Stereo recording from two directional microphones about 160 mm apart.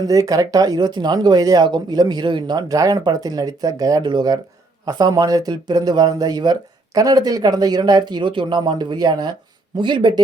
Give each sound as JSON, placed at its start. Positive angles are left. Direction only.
{"t": 0.0, "sound": "speech", "side_deg": -20}